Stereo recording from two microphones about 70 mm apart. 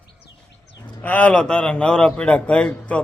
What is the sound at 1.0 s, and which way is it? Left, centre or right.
A man's voice, left.